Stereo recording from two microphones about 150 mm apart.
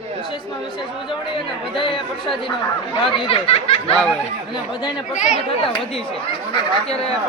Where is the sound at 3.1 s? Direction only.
35° left (ahead or behind).